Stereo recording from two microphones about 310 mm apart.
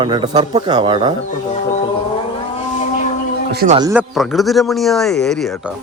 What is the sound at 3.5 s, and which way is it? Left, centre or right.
Speech, right.